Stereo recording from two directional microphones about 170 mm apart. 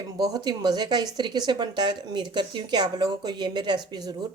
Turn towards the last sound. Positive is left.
turn(degrees=-25)  # may be behind; listen again after turning